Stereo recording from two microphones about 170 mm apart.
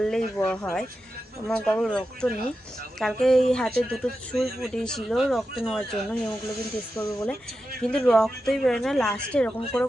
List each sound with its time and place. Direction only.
0.0 s speech: 5° left (ahead or behind)
7.0 s speech: 15° left (ahead or behind)